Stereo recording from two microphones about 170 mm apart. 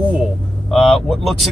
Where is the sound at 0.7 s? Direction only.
5° left (ahead or behind).